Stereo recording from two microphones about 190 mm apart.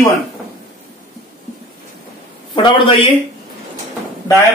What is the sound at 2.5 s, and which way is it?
Speech, 25° left (ahead or behind).